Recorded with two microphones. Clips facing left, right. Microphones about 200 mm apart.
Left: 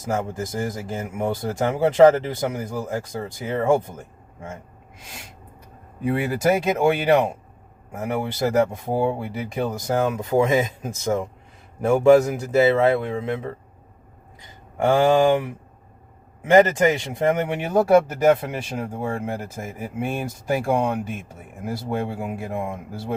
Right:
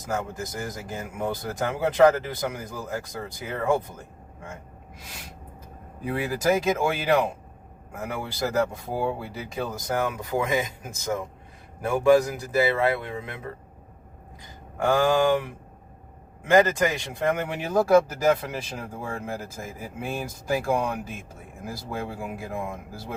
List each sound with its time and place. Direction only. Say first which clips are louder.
0.0 s speech: left 4 dB; 25° left (ahead or behind)
6.1 s speech: left 4 dB; 25° left (ahead or behind)
14.8 s speech: left 4 dB; 25° left (ahead or behind)
16.5 s speech: left 4 dB; 25° left (ahead or behind)